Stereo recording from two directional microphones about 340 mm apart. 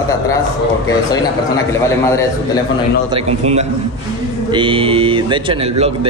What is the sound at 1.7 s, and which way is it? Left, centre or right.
Speech, centre.